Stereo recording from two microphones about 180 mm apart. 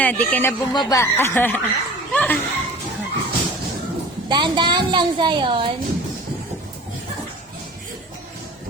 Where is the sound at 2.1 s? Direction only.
10° left (ahead or behind).